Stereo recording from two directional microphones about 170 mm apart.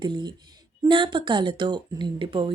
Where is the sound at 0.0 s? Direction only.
25° right (ahead or behind).